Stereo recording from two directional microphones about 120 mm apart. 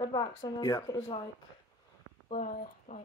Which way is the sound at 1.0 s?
50° left (ahead or behind).